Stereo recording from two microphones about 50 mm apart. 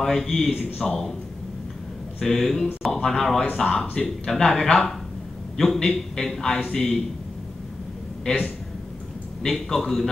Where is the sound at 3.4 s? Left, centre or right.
Left.